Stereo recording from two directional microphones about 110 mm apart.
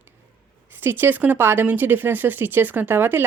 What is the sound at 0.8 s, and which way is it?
Speech, 20° right (ahead or behind).